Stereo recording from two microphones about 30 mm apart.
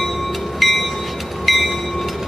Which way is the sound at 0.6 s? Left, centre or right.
Centre.